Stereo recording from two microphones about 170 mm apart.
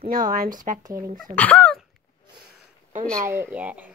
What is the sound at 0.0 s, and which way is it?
Speech, 55° right (ahead or behind).